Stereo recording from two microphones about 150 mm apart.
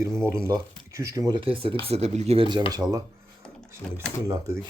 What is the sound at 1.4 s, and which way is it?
Speech, 40° right (ahead or behind).